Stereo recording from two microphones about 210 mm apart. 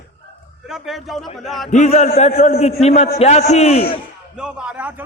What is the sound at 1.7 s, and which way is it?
A man's voice, 35° left (ahead or behind).